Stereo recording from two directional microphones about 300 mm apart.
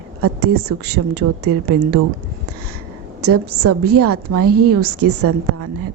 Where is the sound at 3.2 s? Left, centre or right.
Right.